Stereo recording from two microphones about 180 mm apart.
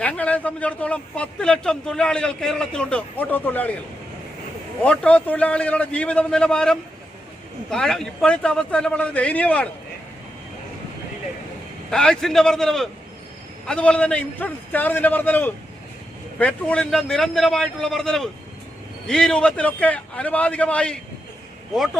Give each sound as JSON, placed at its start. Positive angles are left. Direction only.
{"t": 0.0, "sound": "a man's voice", "side_deg": 10}
{"t": 4.8, "sound": "a man's voice", "side_deg": 5}
{"t": 11.9, "sound": "a man's voice", "side_deg": 5}